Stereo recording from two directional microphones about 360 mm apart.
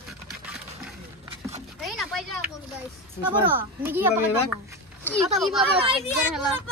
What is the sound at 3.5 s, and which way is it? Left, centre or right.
Speech, centre.